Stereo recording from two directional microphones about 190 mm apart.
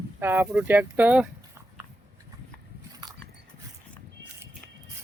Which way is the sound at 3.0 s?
20° right (ahead or behind).